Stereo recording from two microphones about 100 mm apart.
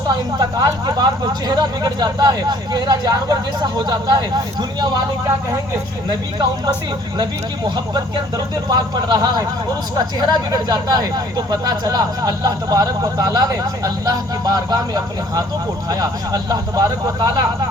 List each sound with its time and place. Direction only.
0.3 s speech: 40° right (ahead or behind)
6.1 s speech: 50° right (ahead or behind)
8.7 s speech: 40° right (ahead or behind)